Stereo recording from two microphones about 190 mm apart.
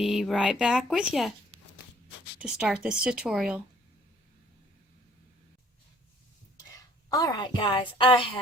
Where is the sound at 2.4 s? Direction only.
5° right (ahead or behind).